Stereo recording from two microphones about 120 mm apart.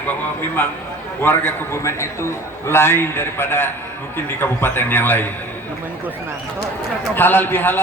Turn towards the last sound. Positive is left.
turn(degrees=15)  # may be behind; listen again after turning